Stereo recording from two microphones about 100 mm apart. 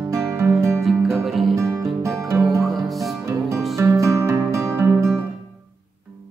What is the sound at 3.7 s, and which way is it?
Music, 30° right (ahead or behind).